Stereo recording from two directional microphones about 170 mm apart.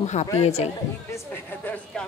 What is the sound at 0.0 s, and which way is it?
Speech, 40° left (ahead or behind).